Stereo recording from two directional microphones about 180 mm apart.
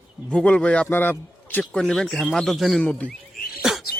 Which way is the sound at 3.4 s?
60° left (ahead or behind).